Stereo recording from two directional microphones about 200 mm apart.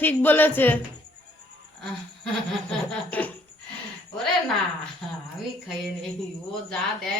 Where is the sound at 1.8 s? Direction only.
5° left (ahead or behind).